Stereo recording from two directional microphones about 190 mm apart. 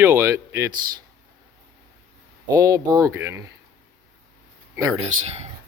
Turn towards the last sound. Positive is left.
turn(degrees=-35)  # may be behind; listen again after turning